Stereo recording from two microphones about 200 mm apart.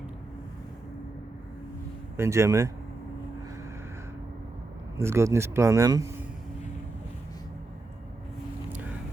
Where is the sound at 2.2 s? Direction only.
15° right (ahead or behind).